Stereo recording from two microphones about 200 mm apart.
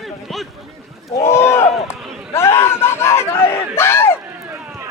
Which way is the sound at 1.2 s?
10° left (ahead or behind).